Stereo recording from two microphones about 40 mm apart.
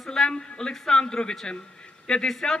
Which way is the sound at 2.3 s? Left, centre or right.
Centre.